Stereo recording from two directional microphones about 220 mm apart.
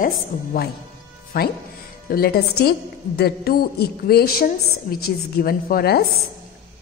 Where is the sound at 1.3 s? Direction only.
45° left (ahead or behind).